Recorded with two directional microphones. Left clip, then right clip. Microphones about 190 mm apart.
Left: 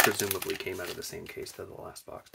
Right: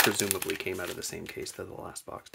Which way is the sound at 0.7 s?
25° right (ahead or behind).